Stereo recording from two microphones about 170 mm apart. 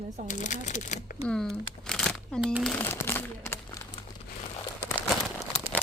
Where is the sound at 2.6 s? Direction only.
10° left (ahead or behind).